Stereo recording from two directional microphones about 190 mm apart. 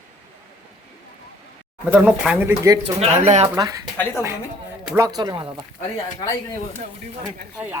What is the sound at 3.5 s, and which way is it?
Speech, 20° right (ahead or behind).